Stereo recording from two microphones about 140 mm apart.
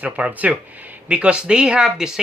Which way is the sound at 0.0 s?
10° right (ahead or behind).